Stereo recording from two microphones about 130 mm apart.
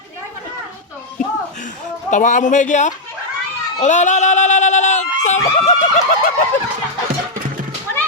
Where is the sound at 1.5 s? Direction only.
75° left (ahead or behind).